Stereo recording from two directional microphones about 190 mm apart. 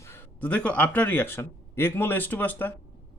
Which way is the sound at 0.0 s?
10° left (ahead or behind).